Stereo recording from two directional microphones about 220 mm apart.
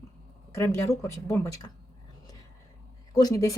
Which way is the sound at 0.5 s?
10° left (ahead or behind).